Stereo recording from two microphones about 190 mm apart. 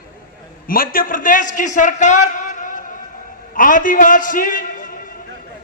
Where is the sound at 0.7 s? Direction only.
50° left (ahead or behind).